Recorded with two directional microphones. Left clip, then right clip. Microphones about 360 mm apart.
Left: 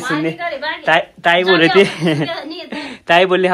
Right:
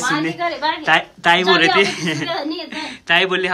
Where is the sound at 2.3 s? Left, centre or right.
Right.